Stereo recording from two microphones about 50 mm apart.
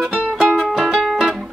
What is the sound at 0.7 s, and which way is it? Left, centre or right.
Music, centre.